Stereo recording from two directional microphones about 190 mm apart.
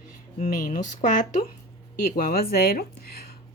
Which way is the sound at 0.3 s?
40° left (ahead or behind).